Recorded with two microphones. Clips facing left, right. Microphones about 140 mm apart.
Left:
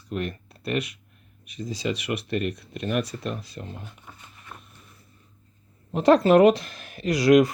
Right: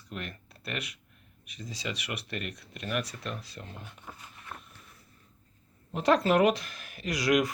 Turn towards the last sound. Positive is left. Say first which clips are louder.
# left 9 dB
turn(degrees=30)  # may be behind; listen again after turning